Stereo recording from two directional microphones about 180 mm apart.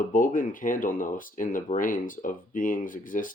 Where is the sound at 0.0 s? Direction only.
50° left (ahead or behind).